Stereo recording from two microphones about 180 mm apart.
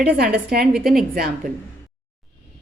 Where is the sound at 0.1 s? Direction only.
60° right (ahead or behind).